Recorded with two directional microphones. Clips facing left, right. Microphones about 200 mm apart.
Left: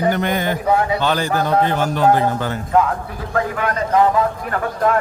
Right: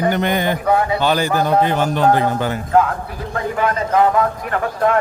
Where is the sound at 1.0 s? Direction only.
10° right (ahead or behind).